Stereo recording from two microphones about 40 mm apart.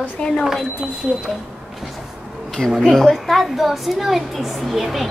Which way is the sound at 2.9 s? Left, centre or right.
Centre.